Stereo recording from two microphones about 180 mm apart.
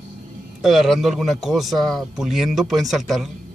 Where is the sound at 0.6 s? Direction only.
Centre (ahead or behind).